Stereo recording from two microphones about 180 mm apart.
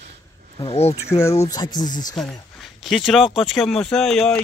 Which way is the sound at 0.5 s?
35° left (ahead or behind).